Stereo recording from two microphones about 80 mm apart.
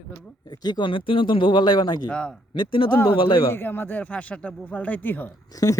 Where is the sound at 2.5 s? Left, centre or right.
Left.